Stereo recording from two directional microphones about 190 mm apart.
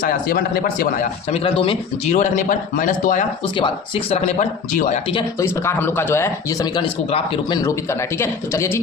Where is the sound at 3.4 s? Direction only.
25° left (ahead or behind).